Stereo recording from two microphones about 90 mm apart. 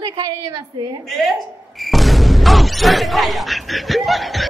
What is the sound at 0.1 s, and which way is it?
Speech, 40° right (ahead or behind).